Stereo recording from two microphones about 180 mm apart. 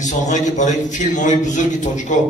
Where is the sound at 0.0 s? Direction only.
40° left (ahead or behind).